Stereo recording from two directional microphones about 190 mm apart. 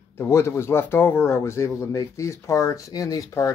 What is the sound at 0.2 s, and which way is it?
Speech, 15° left (ahead or behind).